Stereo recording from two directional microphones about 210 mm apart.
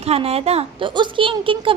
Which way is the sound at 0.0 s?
30° right (ahead or behind).